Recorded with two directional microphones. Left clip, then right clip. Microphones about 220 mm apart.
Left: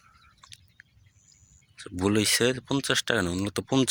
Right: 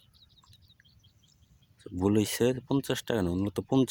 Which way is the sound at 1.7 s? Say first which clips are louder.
Left 2 dB; 15° right (ahead or behind).